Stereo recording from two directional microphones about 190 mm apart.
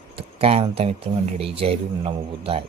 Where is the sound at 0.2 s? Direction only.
30° right (ahead or behind).